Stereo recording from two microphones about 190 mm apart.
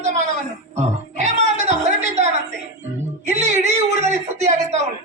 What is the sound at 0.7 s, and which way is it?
Music, 40° right (ahead or behind).